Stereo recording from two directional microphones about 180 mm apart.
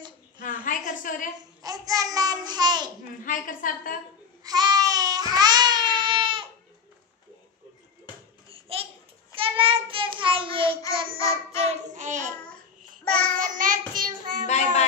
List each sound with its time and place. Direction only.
0.4 s a sound: 45° left (ahead or behind)
1.6 s babbling: 20° right (ahead or behind)
3.3 s a sound: 50° left (ahead or behind)
4.4 s baby cry: 20° right (ahead or behind)
8.5 s babbling: 30° right (ahead or behind)
9.3 s child singing: 30° right (ahead or behind)
11.1 s child singing: 15° left (ahead or behind)
11.8 s child singing: 45° right (ahead or behind)
13.0 s child singing: 5° left (ahead or behind)
13.4 s child singing: 50° right (ahead or behind)